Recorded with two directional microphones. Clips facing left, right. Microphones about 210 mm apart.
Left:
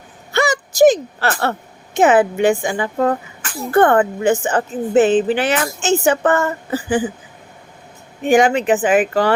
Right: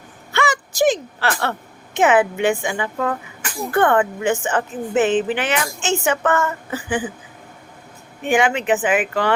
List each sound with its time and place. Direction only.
0.3 s a woman's voice: 40° left (ahead or behind)
8.3 s a woman's voice: 40° left (ahead or behind)